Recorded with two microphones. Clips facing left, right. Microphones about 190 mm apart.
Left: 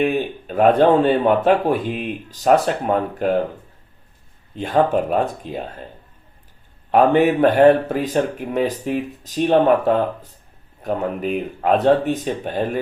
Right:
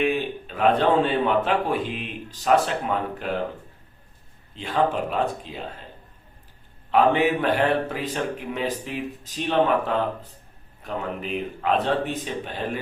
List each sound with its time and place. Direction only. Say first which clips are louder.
0.0 s speech: left 4 dB; 45° left (ahead or behind)
4.5 s speech: left 6 dB; 50° left (ahead or behind)
6.9 s speech: left 5 dB; 50° left (ahead or behind)